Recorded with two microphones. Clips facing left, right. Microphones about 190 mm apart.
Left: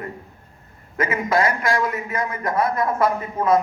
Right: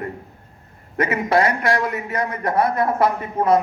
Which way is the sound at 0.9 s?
65° right (ahead or behind).